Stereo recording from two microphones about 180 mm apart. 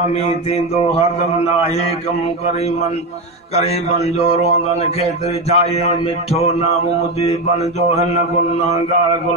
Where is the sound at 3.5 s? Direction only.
35° left (ahead or behind).